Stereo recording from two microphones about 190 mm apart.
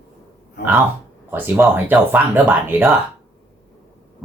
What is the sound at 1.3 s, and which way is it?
Speech, 10° right (ahead or behind).